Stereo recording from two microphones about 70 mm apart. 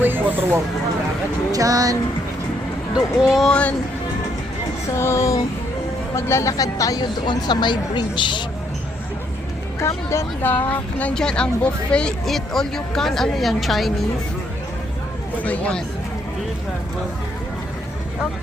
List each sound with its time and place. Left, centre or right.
0.0 s speech: right
1.5 s a sound: right
2.9 s speech: centre
3.4 s speech: centre
4.9 s a sound: left
6.1 s speech: left
6.5 s speech: left
9.8 s a sound: left
10.4 s speech: left
11.1 s speech: centre
15.4 s speech: centre